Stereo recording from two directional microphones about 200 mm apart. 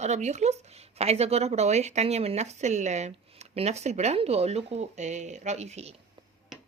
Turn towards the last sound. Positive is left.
turn(degrees=-35)  # may be behind; listen again after turning